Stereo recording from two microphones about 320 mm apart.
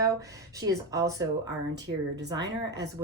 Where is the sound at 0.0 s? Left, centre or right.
Centre.